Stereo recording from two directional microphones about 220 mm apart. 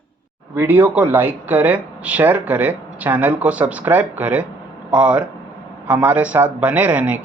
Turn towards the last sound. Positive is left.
turn(degrees=-5)  # may be behind; listen again after turning